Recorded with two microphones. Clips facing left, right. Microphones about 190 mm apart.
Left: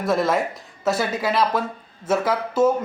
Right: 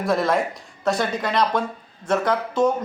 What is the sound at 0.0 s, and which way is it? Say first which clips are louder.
Speech: even; centre (ahead or behind).